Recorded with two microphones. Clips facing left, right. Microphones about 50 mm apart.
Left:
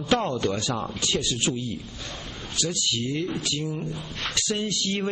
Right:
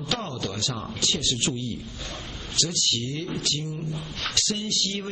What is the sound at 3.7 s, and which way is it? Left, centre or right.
Speech, left.